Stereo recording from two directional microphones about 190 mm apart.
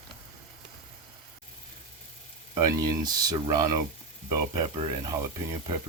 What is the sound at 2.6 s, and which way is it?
Speech, 20° right (ahead or behind).